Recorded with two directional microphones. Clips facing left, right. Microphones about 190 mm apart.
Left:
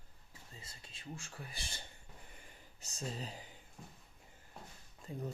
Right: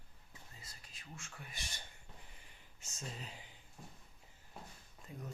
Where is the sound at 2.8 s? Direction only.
35° left (ahead or behind).